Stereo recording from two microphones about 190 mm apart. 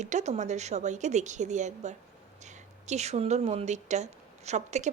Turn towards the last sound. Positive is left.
turn(degrees=-35)  # may be behind; listen again after turning